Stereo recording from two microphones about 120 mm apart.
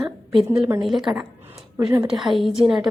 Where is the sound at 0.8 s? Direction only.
Centre (ahead or behind).